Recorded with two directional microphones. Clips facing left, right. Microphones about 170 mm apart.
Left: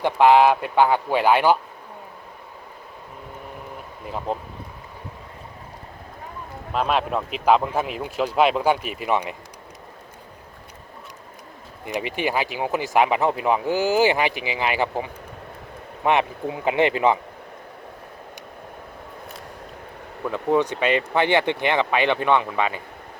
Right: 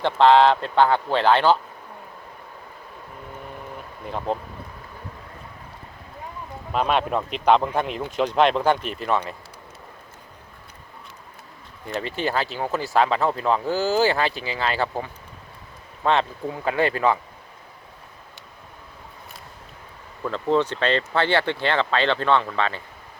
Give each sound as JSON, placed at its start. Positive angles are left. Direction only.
{"t": 0.0, "sound": "speech", "side_deg": 10}
{"t": 4.0, "sound": "speech", "side_deg": 5}
{"t": 6.7, "sound": "speech", "side_deg": 0}
{"t": 11.9, "sound": "speech", "side_deg": 15}
{"t": 20.2, "sound": "speech", "side_deg": 15}